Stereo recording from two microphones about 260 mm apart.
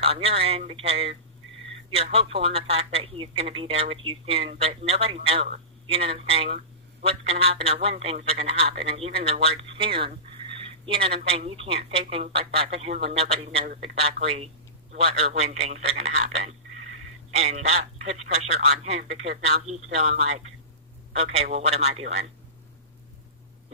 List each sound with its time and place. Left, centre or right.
0.0 s speech: right
13.7 s a man's voice: right
14.2 s speech: right
17.4 s speech: right